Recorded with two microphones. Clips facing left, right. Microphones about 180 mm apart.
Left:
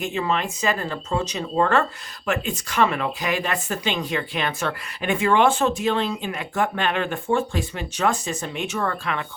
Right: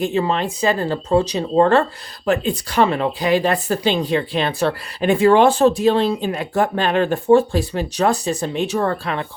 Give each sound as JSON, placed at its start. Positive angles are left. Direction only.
{"t": 0.0, "sound": "speech", "side_deg": -35}